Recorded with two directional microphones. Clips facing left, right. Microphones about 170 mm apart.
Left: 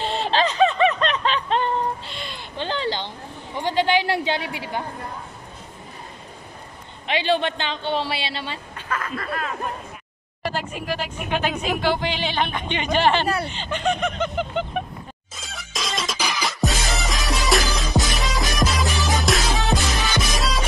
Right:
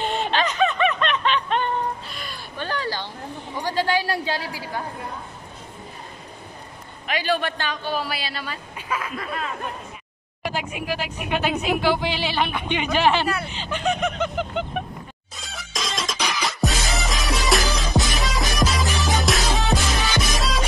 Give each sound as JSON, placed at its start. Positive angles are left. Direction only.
{"t": 0.0, "sound": "snicker", "side_deg": 35}
{"t": 3.6, "sound": "a woman's voice", "side_deg": 20}
{"t": 7.1, "sound": "a man's voice", "side_deg": 25}
{"t": 8.7, "sound": "a woman's voice", "side_deg": -10}
{"t": 15.3, "sound": "music", "side_deg": 0}